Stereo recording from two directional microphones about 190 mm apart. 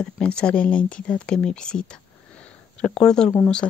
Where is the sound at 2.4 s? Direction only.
5° left (ahead or behind).